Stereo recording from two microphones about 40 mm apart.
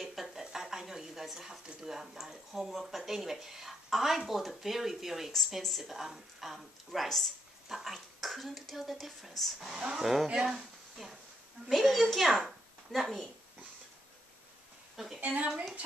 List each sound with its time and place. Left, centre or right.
0.0 s a sound: centre
1.8 s speech: centre
7.6 s speech: centre
9.8 s a woman's voice: centre
15.1 s a woman's voice: right